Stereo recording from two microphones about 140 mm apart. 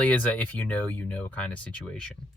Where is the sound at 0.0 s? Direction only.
10° left (ahead or behind).